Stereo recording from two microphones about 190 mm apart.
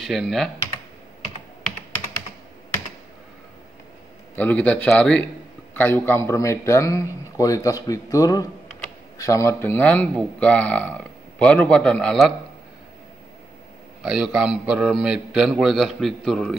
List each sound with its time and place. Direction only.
0.0 s a man's voice: centre (ahead or behind)
4.4 s a man's voice: 10° left (ahead or behind)
14.0 s a man's voice: 5° right (ahead or behind)